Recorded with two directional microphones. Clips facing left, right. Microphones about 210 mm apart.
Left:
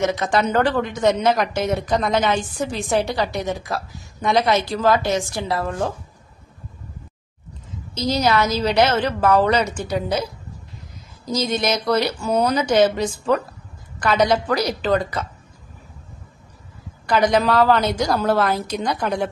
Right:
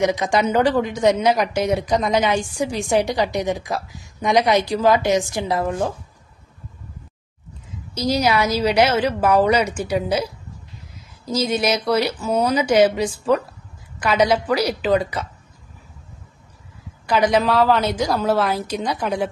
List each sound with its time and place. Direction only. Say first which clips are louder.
0.0 s a woman's voice: right 1 dB; 15° right (ahead or behind)
7.9 s a woman's voice: even; 10° right (ahead or behind)
11.3 s a woman's voice: right 1 dB; 10° right (ahead or behind)
17.0 s a woman's voice: even; 5° right (ahead or behind)